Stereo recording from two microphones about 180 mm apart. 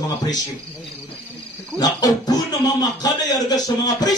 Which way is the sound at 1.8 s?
20° left (ahead or behind).